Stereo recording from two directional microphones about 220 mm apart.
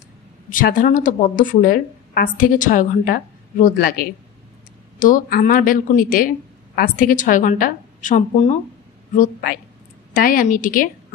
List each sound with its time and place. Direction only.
0.5 s speech: 40° left (ahead or behind)